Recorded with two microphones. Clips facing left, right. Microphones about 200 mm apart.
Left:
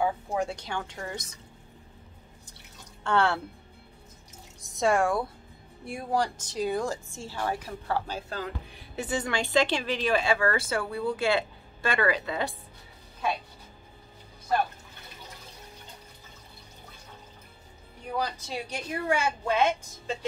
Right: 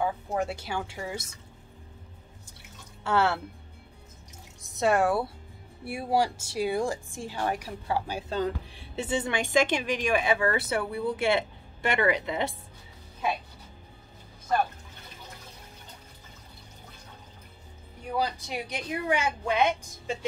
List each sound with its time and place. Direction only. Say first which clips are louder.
0.3 s speech: even; 5° right (ahead or behind)
3.0 s speech: even; 5° right (ahead or behind)
4.6 s speech: even; centre (ahead or behind)
8.3 s speech: right 6 dB; 25° right (ahead or behind)
18.1 s speech: right 2 dB; 15° right (ahead or behind)